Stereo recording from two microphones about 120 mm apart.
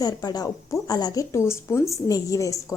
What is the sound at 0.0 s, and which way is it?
A woman's voice, 35° left (ahead or behind).